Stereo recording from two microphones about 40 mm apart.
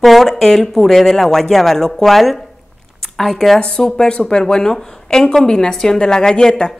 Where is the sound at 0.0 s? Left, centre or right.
Centre.